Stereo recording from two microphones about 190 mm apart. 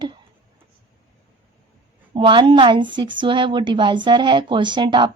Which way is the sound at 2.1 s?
25° right (ahead or behind).